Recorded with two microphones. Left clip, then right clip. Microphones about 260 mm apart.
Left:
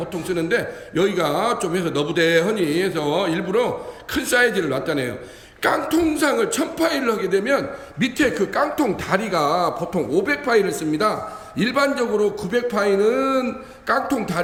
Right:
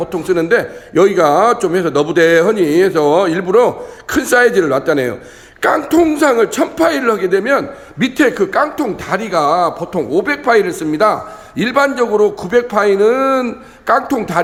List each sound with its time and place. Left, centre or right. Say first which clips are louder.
0.1 s speech: right 9 dB; centre